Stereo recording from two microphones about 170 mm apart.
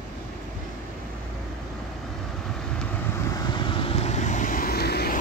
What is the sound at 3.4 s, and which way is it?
Vehicle, 25° left (ahead or behind).